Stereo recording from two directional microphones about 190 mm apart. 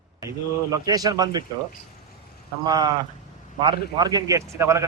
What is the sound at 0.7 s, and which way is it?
Speech, 20° right (ahead or behind).